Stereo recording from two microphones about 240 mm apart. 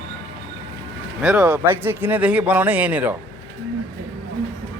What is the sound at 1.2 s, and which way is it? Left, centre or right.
Speech, centre.